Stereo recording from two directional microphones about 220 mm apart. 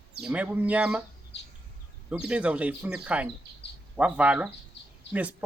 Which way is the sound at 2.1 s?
5° right (ahead or behind).